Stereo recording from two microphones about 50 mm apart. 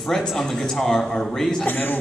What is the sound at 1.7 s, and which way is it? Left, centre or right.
Speech, left.